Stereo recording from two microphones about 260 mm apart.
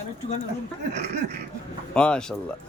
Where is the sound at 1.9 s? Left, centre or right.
Centre.